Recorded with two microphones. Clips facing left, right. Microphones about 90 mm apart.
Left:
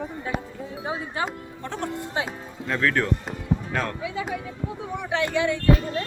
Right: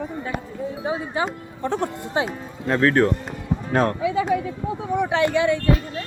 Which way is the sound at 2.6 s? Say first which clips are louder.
Right 6 dB; 35° right (ahead or behind).